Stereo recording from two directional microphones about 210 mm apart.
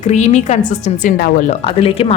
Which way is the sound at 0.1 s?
35° left (ahead or behind).